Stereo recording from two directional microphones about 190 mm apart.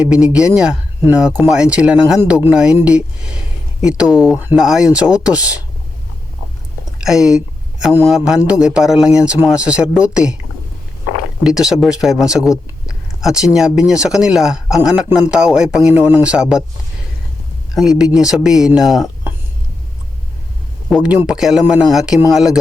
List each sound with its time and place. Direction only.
0.0 s speech: 5° right (ahead or behind)
7.0 s speech: 5° right (ahead or behind)
11.4 s speech: 5° right (ahead or behind)
17.7 s speech: 5° right (ahead or behind)
20.9 s speech: 5° right (ahead or behind)